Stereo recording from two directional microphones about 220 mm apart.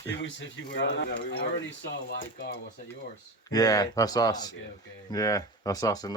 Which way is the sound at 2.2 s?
40° left (ahead or behind).